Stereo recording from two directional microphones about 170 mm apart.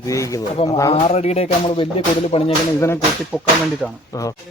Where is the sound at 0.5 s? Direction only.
35° left (ahead or behind).